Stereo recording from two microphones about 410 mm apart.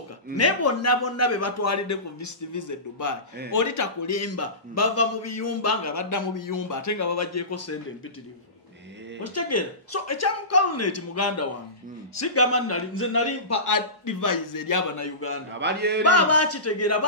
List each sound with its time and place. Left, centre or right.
0.4 s a man's voice: left
9.2 s a man's voice: left
15.6 s speech: right
16.0 s a man's voice: left